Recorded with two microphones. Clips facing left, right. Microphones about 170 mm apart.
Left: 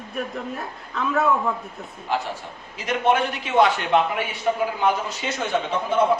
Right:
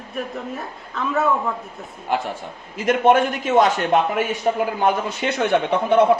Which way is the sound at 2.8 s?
50° right (ahead or behind).